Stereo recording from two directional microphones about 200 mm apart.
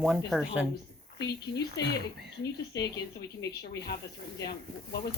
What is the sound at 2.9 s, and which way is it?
Speech, 55° left (ahead or behind).